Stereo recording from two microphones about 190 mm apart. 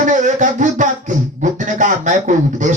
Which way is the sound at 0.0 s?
40° right (ahead or behind).